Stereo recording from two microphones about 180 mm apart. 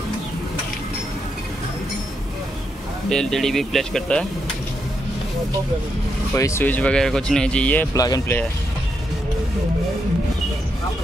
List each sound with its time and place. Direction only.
3.1 s speech: 5° left (ahead or behind)
6.3 s speech: 15° left (ahead or behind)